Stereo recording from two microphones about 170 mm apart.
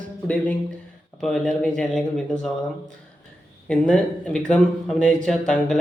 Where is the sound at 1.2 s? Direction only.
5° left (ahead or behind).